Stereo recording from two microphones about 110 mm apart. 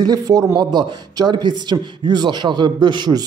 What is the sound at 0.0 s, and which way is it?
A man's voice, 35° right (ahead or behind).